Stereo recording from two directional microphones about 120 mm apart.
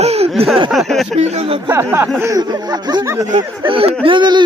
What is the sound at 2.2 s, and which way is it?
Speech, 30° right (ahead or behind).